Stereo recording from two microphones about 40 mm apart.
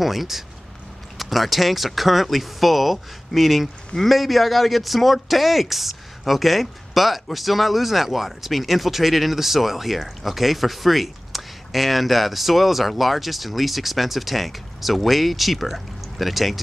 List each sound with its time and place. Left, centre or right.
0.0 s speech: centre